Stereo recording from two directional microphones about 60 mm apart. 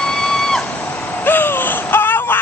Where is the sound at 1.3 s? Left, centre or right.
Left.